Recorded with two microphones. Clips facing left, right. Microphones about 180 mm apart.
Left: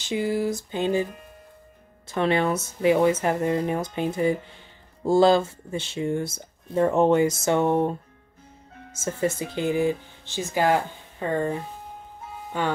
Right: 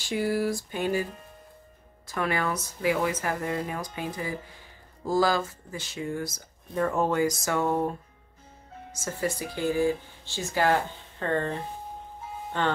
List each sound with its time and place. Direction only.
0.0 s speech: 20° left (ahead or behind)
2.0 s speech: 25° left (ahead or behind)
8.9 s speech: 25° left (ahead or behind)